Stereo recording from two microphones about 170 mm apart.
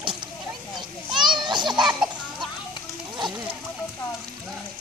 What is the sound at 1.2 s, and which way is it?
Children playing, 25° right (ahead or behind).